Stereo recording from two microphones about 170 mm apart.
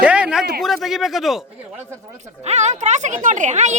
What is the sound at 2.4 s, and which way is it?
A woman's voice, 40° right (ahead or behind).